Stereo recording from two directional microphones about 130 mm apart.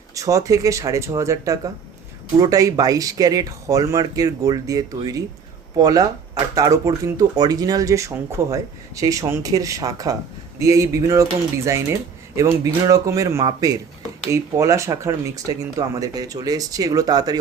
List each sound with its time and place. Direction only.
0.1 s speech: 25° right (ahead or behind)